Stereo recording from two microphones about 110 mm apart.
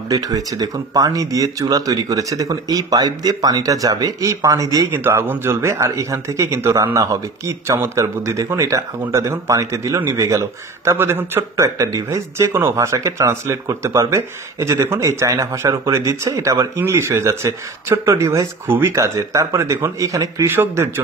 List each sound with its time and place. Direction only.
0.1 s speech: 35° right (ahead or behind)
4.8 s speech: 20° right (ahead or behind)